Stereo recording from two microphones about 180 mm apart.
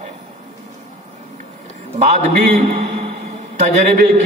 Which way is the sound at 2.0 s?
40° right (ahead or behind).